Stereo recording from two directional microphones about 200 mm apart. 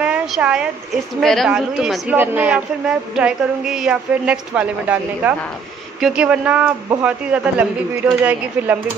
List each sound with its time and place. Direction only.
0.0 s a woman's voice: 5° right (ahead or behind)